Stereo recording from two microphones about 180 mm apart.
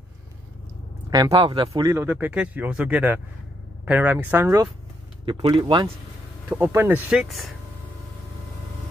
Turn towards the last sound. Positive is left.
turn(degrees=-5)  # may be behind; listen again after turning